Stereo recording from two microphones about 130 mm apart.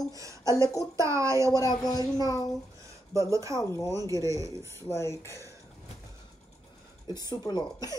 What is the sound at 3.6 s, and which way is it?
Speech, 25° left (ahead or behind).